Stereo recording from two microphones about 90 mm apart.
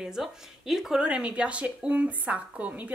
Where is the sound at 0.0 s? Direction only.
5° right (ahead or behind).